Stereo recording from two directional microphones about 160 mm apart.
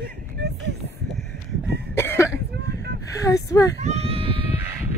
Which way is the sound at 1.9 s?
15° left (ahead or behind).